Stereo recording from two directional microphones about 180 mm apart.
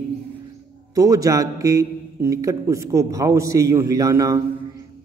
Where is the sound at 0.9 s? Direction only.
20° right (ahead or behind).